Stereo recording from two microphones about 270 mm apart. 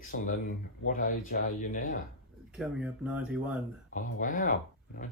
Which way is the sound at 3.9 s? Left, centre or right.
Left.